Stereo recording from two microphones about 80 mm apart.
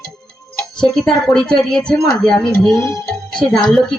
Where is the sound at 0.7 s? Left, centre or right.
Centre.